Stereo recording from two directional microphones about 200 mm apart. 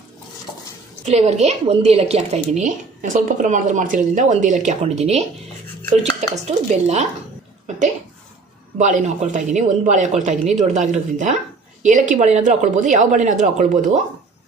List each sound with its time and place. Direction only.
1.0 s a woman's voice: 35° right (ahead or behind)
8.7 s a woman's voice: 40° right (ahead or behind)